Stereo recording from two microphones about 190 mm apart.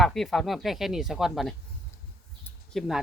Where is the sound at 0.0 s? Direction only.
Centre (ahead or behind).